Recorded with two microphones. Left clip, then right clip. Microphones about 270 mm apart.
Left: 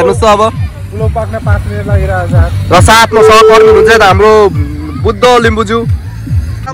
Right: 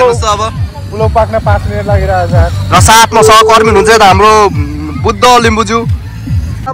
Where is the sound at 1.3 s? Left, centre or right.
Right.